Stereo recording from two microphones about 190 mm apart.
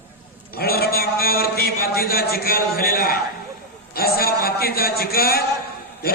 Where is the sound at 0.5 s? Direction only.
55° left (ahead or behind).